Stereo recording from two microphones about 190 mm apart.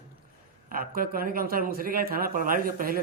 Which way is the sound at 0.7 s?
50° right (ahead or behind).